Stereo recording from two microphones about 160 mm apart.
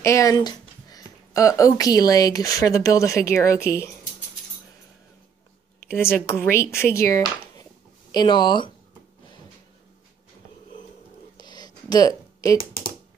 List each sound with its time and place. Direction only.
0.0 s speech: 20° left (ahead or behind)
5.9 s speech: 15° left (ahead or behind)
11.3 s a sound: 25° left (ahead or behind)